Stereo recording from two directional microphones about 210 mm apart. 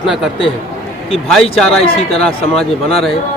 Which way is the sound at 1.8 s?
30° left (ahead or behind).